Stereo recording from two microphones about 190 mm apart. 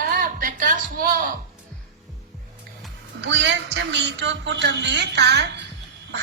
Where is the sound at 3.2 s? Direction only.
70° right (ahead or behind).